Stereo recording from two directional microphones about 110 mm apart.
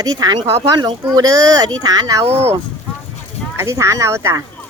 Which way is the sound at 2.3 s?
75° right (ahead or behind).